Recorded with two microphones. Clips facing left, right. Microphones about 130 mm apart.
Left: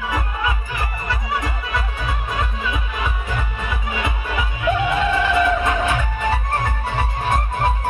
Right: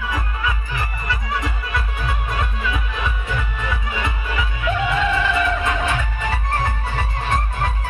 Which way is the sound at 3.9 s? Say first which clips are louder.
Left 1 dB; 15° left (ahead or behind).